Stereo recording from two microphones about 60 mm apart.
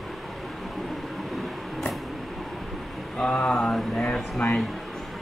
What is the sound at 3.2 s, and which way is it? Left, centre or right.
Speech, centre.